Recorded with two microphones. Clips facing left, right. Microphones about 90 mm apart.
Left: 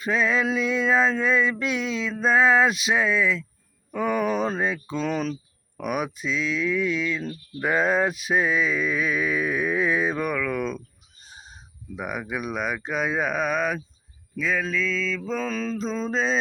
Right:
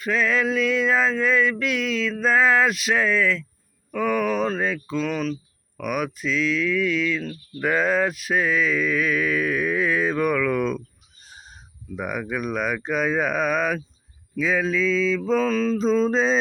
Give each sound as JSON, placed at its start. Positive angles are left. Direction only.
{"t": 0.0, "sound": "mantra", "side_deg": 20}
{"t": 3.9, "sound": "speech", "side_deg": 20}
{"t": 11.9, "sound": "speech", "side_deg": 15}
{"t": 14.3, "sound": "mantra", "side_deg": -5}